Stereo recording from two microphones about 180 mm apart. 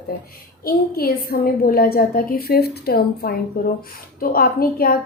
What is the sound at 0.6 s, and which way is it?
A woman's voice, 55° left (ahead or behind).